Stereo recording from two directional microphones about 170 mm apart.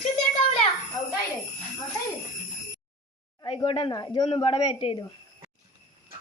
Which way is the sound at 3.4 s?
30° left (ahead or behind).